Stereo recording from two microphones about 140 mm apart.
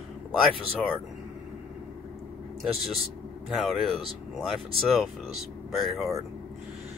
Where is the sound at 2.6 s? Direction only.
Centre (ahead or behind).